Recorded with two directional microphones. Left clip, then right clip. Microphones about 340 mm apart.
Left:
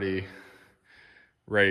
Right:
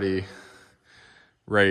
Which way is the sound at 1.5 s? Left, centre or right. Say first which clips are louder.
Right 3 dB; centre.